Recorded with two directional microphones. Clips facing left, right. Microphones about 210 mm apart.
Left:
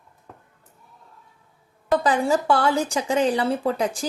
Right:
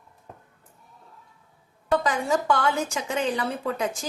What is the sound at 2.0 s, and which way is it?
Speech, 30° left (ahead or behind).